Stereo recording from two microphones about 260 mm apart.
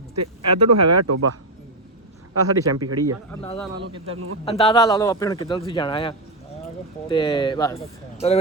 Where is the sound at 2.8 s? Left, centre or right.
Right.